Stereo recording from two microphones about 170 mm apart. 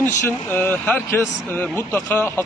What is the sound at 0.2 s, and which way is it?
Speech, 15° left (ahead or behind).